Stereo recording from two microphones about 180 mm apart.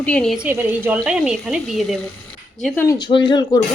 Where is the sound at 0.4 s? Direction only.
10° right (ahead or behind).